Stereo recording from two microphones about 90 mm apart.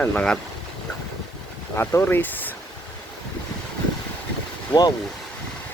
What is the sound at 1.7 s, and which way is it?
Speech, 25° left (ahead or behind).